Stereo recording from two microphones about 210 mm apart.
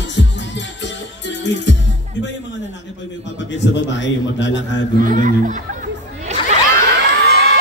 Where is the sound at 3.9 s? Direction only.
60° left (ahead or behind).